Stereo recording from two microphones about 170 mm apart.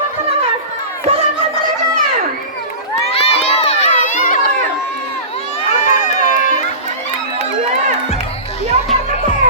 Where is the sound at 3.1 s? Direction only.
35° left (ahead or behind).